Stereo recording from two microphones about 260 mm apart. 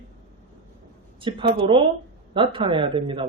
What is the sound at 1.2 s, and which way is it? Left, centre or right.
A woman's voice, centre.